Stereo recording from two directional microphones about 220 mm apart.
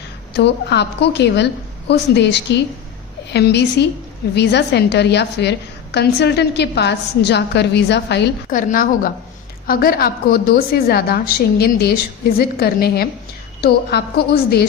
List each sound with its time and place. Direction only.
0.3 s a woman's voice: 50° left (ahead or behind)
8.4 s a woman's voice: 40° left (ahead or behind)